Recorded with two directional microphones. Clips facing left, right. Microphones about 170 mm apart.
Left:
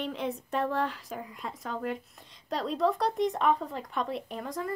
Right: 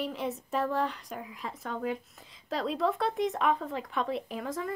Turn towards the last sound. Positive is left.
turn(degrees=0)  # may be behind; listen again after turning